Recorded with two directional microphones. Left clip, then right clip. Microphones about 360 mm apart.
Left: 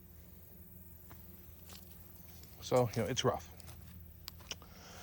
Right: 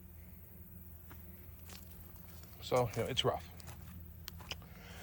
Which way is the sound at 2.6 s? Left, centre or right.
Left.